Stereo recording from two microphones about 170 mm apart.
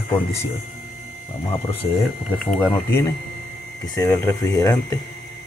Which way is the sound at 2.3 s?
5° left (ahead or behind).